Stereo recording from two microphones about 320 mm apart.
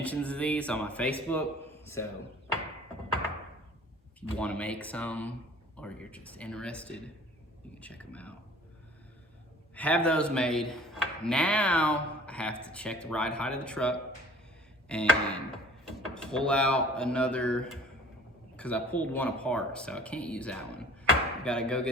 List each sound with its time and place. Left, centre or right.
0.0 s a man's voice: centre
4.4 s speech: centre
9.7 s speech: centre